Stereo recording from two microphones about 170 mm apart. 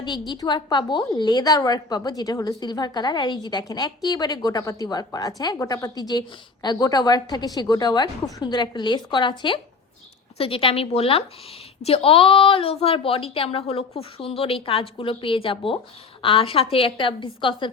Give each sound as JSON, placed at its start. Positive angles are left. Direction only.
{"t": 0.0, "sound": "a woman's voice", "side_deg": 25}